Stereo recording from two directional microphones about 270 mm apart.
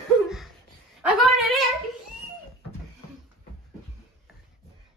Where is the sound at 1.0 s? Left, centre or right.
Centre.